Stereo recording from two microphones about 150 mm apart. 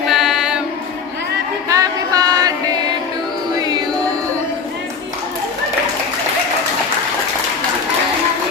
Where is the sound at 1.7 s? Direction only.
25° right (ahead or behind).